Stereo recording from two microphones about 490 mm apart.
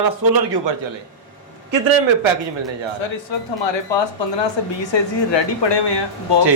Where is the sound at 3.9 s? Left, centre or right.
Left.